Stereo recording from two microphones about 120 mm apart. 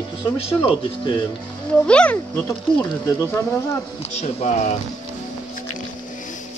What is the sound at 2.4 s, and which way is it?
Speech, 25° left (ahead or behind).